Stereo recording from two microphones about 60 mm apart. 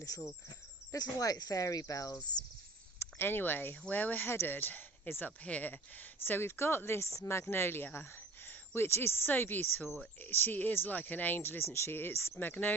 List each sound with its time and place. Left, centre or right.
0.9 s speech: left
3.0 s speech: left
6.2 s speech: left